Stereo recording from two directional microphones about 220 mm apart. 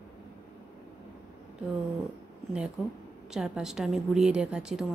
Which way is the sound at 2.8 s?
5° right (ahead or behind).